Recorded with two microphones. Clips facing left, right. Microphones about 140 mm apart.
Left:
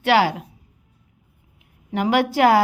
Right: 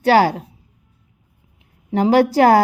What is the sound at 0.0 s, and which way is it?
Speech, 40° right (ahead or behind).